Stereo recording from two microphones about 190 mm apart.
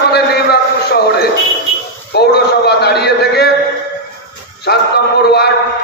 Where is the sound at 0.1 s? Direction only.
55° left (ahead or behind).